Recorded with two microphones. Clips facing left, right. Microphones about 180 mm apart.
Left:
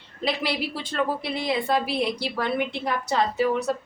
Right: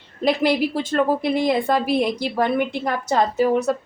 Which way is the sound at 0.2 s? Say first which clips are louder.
Right 8 dB; 50° right (ahead or behind).